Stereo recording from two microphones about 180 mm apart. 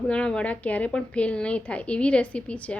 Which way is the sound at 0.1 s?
5° left (ahead or behind).